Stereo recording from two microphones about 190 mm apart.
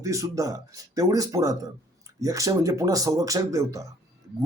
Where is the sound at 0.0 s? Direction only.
15° right (ahead or behind).